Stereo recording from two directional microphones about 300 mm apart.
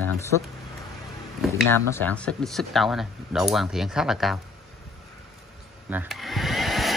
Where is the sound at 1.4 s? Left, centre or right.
Centre.